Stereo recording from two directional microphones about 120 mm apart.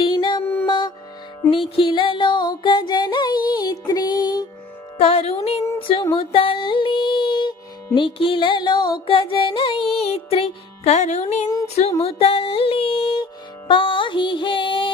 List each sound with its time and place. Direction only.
0.0 s music: 40° left (ahead or behind)
1.5 s music: 50° left (ahead or behind)
4.9 s music: 55° left (ahead or behind)
6.1 s a sound: 50° left (ahead or behind)
7.9 s music: 45° left (ahead or behind); by 11.4 s 70° left (ahead or behind)
11.4 s a sound: 30° left (ahead or behind)
11.9 s music: 60° left (ahead or behind); by 14.9 s 40° left (ahead or behind)